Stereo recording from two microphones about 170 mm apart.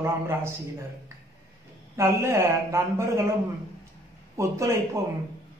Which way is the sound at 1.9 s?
15° right (ahead or behind).